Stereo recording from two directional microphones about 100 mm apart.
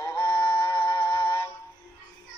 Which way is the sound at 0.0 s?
30° left (ahead or behind).